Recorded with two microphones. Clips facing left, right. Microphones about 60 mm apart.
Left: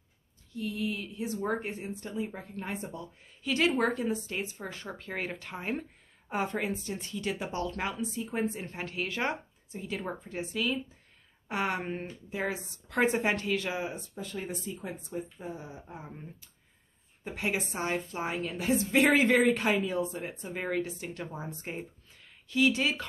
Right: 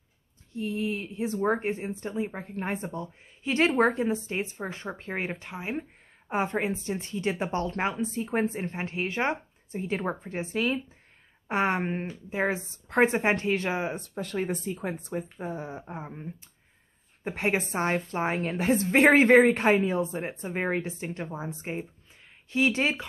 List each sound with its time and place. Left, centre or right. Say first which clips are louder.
0.5 s a woman's voice: right 3 dB; right
5.5 s speech: right 1 dB; centre
6.2 s speech: right 4 dB; right
9.7 s a woman's voice: right 6 dB; right
13.9 s speech: right 7 dB; right
16.0 s speech: right 5 dB; right
17.2 s a woman's voice: right 5 dB; right
22.5 s a woman's voice: right 2 dB; right